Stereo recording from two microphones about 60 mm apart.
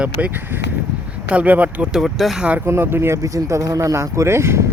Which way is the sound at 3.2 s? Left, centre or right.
Right.